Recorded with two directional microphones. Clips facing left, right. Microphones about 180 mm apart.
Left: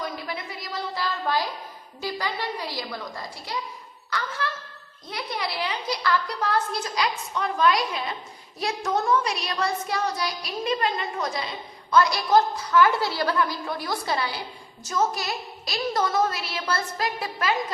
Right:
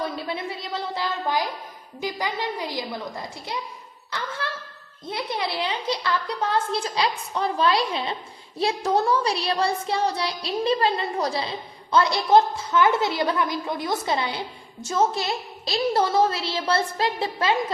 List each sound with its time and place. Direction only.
0.0 s child singing: 25° right (ahead or behind)